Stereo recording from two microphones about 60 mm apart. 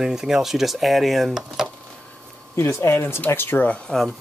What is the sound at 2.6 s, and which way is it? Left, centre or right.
Speech, left.